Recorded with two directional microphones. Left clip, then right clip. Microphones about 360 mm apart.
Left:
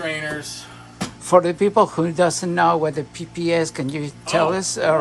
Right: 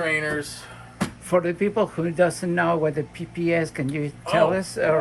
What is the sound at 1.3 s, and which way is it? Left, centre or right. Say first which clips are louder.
Speech: left 7 dB; centre.